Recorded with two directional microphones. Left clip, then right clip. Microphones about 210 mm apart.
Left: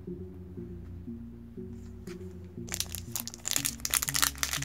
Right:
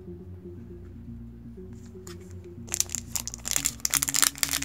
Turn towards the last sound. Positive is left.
turn(degrees=-5)  # may be behind; listen again after turning